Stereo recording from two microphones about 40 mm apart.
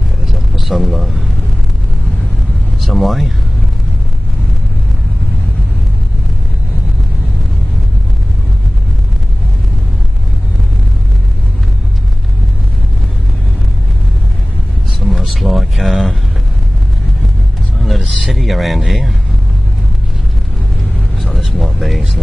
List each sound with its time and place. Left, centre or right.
0.3 s vehicle: centre
2.8 s speech: centre
15.0 s a sound: centre
17.7 s vehicle: centre
18.0 s speech: centre
21.2 s vehicle: centre